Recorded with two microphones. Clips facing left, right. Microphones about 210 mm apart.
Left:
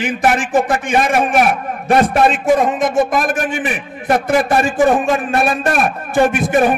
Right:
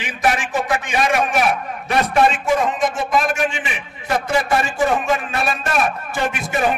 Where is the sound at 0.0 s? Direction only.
50° left (ahead or behind).